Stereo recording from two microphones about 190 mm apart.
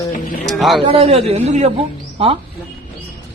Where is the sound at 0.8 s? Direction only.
30° right (ahead or behind).